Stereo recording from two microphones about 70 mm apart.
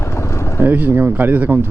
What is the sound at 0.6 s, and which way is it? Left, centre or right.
Speech, right.